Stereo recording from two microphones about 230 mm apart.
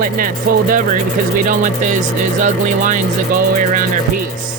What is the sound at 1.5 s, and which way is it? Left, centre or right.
Speech, right.